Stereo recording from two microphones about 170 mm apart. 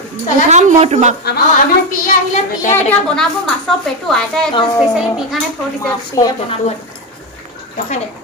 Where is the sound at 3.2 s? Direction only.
5° left (ahead or behind).